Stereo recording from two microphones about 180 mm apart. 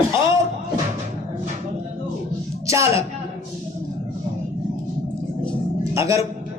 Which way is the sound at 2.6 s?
15° right (ahead or behind).